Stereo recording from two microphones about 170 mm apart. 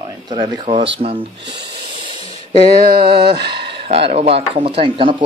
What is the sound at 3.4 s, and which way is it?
Speech, 75° right (ahead or behind).